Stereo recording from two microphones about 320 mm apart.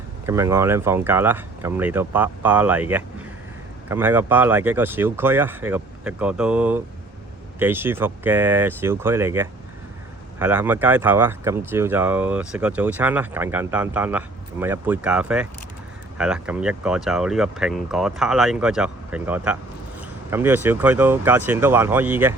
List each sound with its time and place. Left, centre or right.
0.3 s speech: centre